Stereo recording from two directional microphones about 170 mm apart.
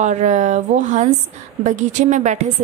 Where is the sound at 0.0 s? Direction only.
45° right (ahead or behind).